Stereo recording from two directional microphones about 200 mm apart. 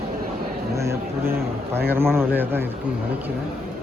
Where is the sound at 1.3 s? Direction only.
50° right (ahead or behind).